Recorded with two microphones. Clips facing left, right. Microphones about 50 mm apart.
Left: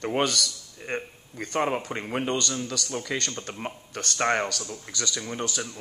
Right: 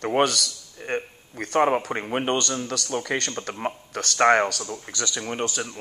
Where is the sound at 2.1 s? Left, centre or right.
Right.